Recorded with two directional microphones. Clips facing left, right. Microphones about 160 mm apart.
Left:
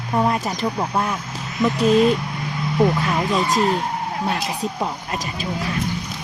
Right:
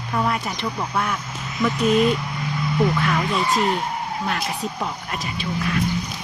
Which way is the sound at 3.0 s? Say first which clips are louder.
Left 1 dB; 35° left (ahead or behind).